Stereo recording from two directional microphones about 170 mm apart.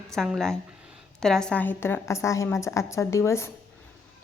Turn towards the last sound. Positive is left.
turn(degrees=15)  # may be behind; listen again after turning